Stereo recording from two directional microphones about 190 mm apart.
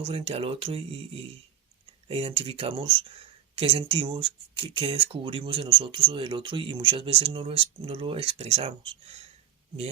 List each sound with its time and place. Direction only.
0.0 s speech: 30° right (ahead or behind)